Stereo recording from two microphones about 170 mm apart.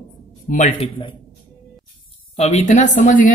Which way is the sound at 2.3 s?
40° left (ahead or behind).